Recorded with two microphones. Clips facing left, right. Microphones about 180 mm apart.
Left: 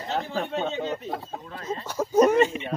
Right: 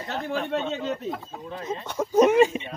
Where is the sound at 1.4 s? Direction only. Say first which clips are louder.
Right 2 dB; 20° right (ahead or behind).